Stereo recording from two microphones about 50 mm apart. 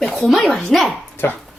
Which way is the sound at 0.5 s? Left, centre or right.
Centre.